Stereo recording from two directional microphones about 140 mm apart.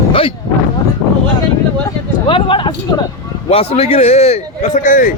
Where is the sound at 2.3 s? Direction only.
35° left (ahead or behind).